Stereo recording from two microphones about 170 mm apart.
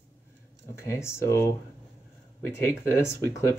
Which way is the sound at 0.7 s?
15° left (ahead or behind).